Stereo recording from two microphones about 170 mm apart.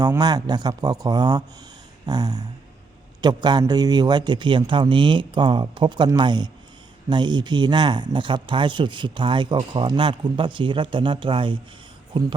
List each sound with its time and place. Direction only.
0.0 s speech: 25° right (ahead or behind)